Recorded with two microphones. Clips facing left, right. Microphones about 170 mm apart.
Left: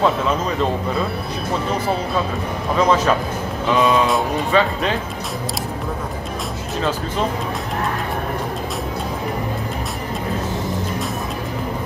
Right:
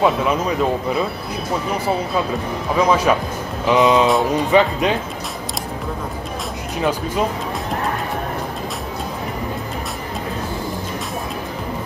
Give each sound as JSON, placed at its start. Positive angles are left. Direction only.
{"t": 0.0, "sound": "speech", "side_deg": -10}
{"t": 2.8, "sound": "speech", "side_deg": -10}
{"t": 6.8, "sound": "speech", "side_deg": -15}